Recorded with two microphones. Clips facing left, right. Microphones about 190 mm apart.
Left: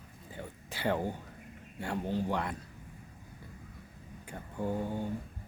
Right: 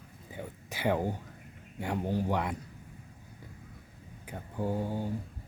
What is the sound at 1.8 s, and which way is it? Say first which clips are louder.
Speech: right 2 dB; 15° right (ahead or behind).